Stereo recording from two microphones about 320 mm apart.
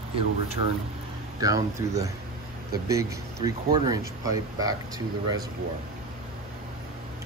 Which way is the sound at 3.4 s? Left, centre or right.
Centre.